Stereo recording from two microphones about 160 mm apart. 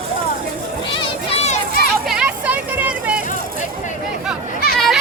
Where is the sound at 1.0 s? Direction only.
40° left (ahead or behind).